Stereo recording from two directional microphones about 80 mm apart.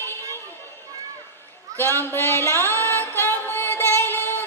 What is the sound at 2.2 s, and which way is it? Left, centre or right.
Music, right.